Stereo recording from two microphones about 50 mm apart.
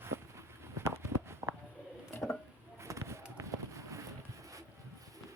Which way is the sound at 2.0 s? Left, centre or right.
Left.